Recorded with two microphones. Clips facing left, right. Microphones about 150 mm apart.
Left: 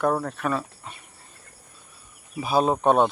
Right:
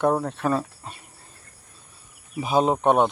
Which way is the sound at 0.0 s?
20° right (ahead or behind).